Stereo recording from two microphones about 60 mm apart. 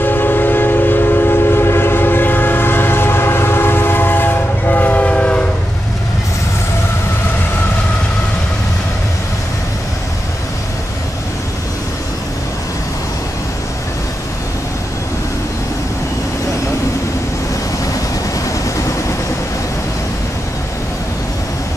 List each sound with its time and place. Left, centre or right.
0.0 s train: left; by 5.4 s centre